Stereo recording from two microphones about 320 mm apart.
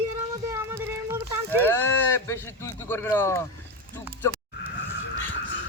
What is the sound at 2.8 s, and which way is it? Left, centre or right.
Speech, centre.